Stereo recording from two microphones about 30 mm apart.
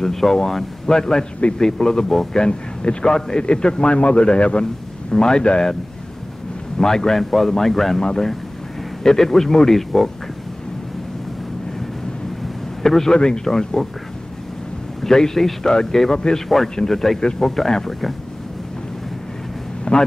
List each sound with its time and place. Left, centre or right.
0.0 s a man's voice: centre
2.3 s a man's voice: left
5.1 s a man's voice: left
5.4 s a man's voice: left
6.8 s speech: centre
9.0 s speech: centre
12.8 s speech: centre
13.1 s a man's voice: left
15.0 s a man's voice: centre
19.8 s vehicle: left